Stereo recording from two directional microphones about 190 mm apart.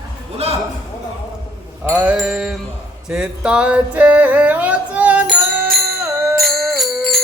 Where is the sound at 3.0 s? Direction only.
5° right (ahead or behind).